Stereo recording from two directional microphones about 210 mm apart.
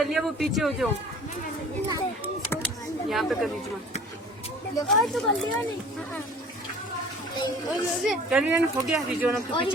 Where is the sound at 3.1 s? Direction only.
Centre (ahead or behind).